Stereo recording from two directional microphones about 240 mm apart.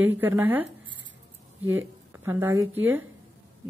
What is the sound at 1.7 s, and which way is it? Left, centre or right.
A woman's voice, centre.